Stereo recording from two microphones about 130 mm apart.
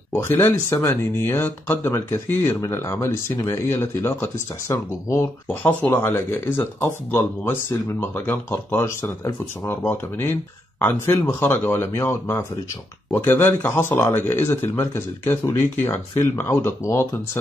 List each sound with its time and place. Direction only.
0.1 s speech: 15° left (ahead or behind)